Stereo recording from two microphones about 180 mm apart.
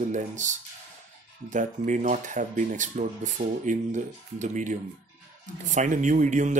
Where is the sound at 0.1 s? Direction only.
45° right (ahead or behind).